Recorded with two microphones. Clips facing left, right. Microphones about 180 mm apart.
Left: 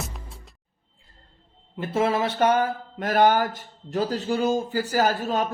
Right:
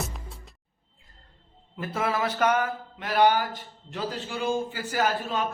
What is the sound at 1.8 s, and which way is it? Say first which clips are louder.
Speech: left 5 dB; 25° left (ahead or behind).